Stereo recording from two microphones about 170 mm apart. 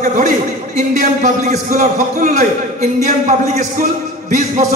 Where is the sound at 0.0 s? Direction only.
45° right (ahead or behind).